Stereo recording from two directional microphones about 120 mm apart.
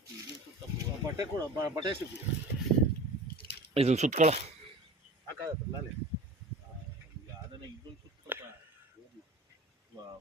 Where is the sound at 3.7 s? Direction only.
65° right (ahead or behind); by 4.4 s 85° right.